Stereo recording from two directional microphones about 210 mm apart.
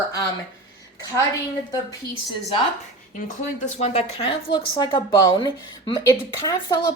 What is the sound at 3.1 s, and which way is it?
A woman's voice, 35° left (ahead or behind).